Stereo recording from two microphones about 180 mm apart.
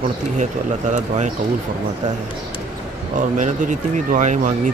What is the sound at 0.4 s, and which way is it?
Speech, 40° right (ahead or behind).